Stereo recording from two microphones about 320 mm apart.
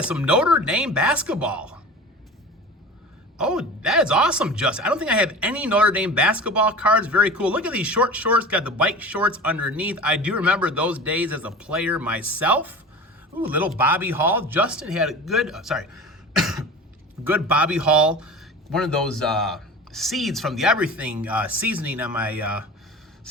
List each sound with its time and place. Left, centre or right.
0.0 s speech: centre
3.3 s speech: centre
13.7 s speech: centre